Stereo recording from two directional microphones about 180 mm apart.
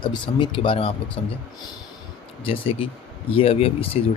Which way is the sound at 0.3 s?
25° left (ahead or behind).